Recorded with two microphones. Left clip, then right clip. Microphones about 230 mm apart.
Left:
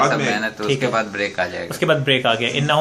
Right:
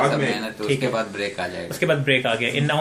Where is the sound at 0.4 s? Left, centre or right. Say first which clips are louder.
Left 3 dB; left.